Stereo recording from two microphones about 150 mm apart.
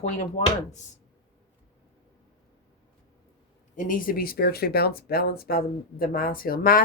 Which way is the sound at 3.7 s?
60° left (ahead or behind).